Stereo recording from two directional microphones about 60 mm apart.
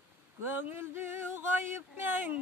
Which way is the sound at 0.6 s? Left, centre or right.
Right.